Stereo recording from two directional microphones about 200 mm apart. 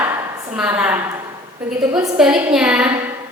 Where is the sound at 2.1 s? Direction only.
5° right (ahead or behind).